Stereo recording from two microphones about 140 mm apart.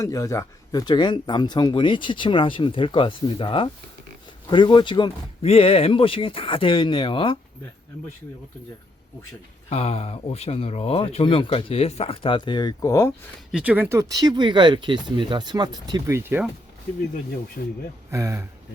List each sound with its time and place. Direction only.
0.0 s speech: 20° left (ahead or behind)
9.6 s speech: 50° left (ahead or behind); by 13.1 s 25° left (ahead or behind)
13.5 s speech: 10° right (ahead or behind)
17.6 s speech: 90° left
18.1 s speech: 20° right (ahead or behind)